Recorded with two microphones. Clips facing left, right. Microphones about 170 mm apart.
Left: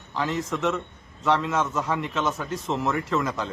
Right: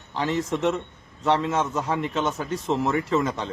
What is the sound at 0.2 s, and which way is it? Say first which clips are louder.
Speech: right 2 dB; centre (ahead or behind).